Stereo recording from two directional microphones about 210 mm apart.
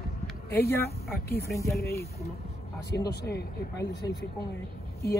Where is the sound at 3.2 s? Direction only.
50° left (ahead or behind).